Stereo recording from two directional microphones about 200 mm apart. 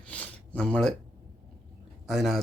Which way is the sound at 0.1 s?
5° left (ahead or behind).